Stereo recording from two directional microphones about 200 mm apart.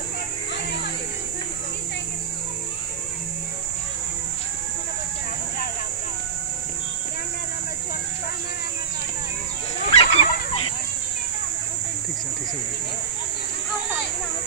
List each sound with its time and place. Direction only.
9.8 s dog: 30° left (ahead or behind)